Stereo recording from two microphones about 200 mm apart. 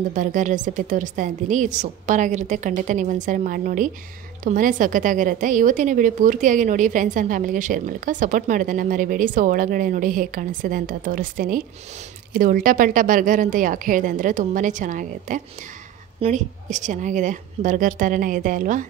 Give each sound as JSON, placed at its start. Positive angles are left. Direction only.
{"t": 0.1, "sound": "a woman's voice", "side_deg": -40}